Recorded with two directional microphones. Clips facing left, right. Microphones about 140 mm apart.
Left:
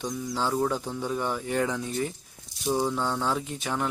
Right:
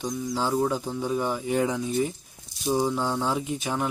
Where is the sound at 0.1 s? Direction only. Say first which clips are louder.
Right 2 dB; centre (ahead or behind).